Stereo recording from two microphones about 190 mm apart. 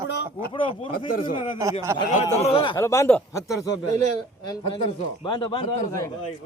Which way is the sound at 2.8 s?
15° left (ahead or behind).